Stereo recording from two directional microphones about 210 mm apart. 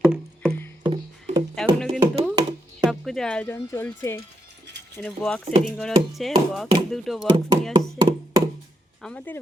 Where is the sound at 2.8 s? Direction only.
Centre (ahead or behind).